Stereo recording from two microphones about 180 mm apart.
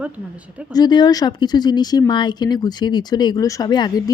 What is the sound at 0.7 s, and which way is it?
Speech, 25° left (ahead or behind).